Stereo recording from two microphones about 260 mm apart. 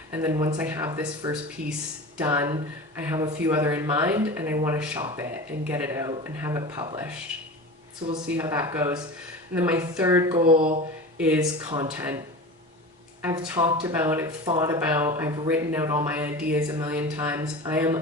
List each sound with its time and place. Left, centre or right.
0.1 s speech: centre
10.3 s speech: right
11.2 s speech: centre
13.2 s speech: centre